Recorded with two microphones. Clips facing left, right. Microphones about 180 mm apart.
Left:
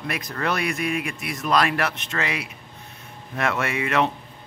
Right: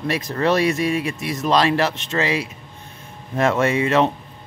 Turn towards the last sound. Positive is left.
turn(degrees=-30)  # may be behind; listen again after turning